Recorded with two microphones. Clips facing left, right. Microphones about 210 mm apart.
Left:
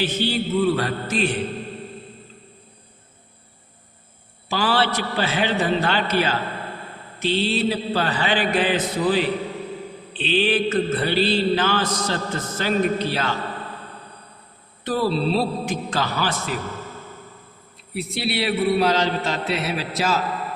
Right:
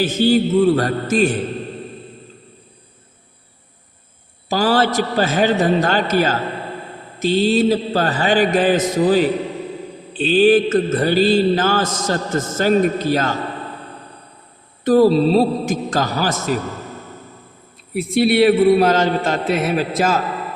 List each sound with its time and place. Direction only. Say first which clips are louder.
0.0 s mantra: right 8 dB; 45° right (ahead or behind)
4.4 s mantra: right 5 dB; 40° right (ahead or behind)
14.8 s mantra: right 9 dB; 45° right (ahead or behind)
17.9 s mantra: right 10 dB; 50° right (ahead or behind)